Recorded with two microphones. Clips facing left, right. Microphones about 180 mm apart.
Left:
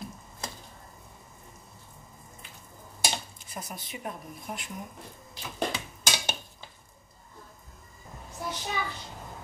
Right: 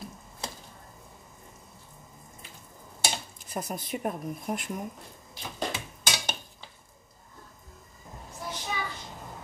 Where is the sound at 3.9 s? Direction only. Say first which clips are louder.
Right 7 dB; 50° right (ahead or behind).